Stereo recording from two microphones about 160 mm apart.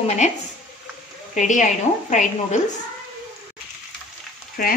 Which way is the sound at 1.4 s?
50° left (ahead or behind).